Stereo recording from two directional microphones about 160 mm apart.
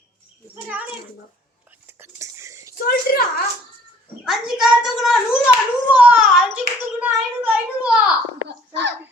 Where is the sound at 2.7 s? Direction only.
65° left (ahead or behind).